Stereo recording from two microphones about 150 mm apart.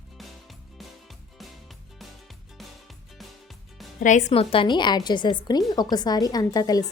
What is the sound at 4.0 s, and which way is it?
A woman's voice, 55° left (ahead or behind).